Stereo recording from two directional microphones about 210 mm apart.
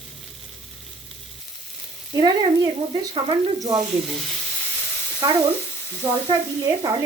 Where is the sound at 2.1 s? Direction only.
20° right (ahead or behind).